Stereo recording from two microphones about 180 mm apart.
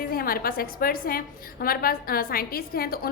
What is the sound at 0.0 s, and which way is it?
A woman's voice, 55° left (ahead or behind).